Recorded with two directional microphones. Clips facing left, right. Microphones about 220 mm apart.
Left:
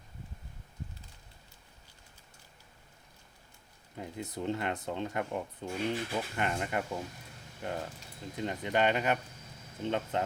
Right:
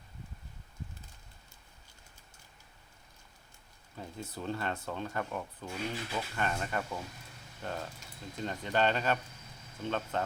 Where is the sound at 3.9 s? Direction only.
20° left (ahead or behind).